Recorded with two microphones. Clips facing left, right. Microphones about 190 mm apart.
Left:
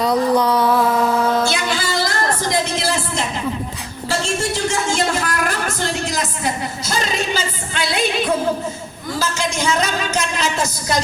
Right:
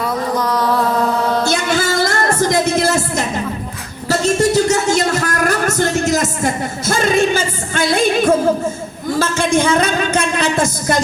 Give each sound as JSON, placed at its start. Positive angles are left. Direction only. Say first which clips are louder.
{"t": 0.3, "sound": "music", "louder": "left 2 dB", "side_deg": 10}
{"t": 1.5, "sound": "music", "louder": "right 5 dB", "side_deg": -45}
{"t": 9.1, "sound": "a man's voice", "louder": "right 7 dB", "side_deg": -55}